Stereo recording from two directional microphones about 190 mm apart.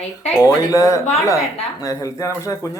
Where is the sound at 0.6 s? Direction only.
15° left (ahead or behind).